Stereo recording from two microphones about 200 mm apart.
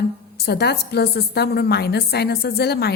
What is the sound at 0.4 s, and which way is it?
A woman's voice, 55° left (ahead or behind).